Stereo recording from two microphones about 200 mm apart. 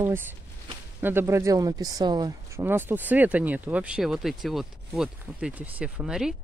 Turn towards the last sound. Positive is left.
turn(degrees=-5)  # may be behind; listen again after turning